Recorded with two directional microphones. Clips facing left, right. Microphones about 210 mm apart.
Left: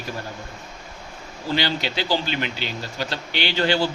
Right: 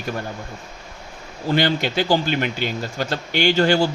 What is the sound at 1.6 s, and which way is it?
Speech, 50° right (ahead or behind).